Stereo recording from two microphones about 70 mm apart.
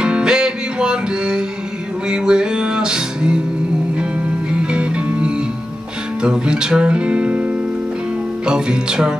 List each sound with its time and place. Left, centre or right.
0.0 s music: centre
4.5 s music: centre
6.2 s speech: centre
8.5 s music: centre